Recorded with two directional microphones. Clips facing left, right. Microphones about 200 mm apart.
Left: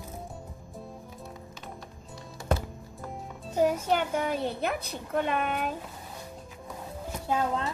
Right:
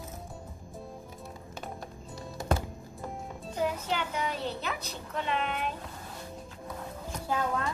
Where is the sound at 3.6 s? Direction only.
50° left (ahead or behind).